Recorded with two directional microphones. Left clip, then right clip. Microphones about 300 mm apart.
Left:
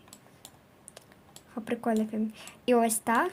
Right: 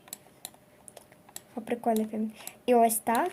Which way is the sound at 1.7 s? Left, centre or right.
Left.